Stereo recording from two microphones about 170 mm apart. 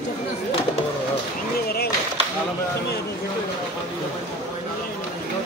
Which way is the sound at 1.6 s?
65° left (ahead or behind).